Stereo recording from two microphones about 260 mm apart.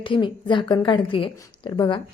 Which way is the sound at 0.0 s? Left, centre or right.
Centre.